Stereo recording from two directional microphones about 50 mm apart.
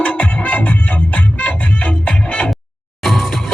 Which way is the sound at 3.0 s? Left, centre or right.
Centre.